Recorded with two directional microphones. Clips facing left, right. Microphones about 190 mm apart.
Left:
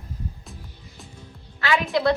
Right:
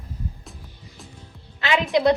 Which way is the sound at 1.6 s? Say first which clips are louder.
Right 2 dB; 20° right (ahead or behind).